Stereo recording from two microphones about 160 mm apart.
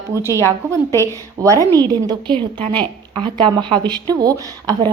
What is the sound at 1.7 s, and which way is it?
Speech, 25° right (ahead or behind).